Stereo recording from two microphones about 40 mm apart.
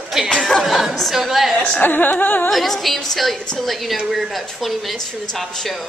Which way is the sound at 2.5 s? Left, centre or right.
Centre.